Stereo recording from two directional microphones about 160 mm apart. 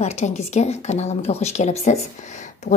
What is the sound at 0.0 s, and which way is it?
Speech, 45° left (ahead or behind).